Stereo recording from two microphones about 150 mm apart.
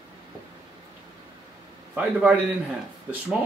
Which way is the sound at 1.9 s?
5° right (ahead or behind).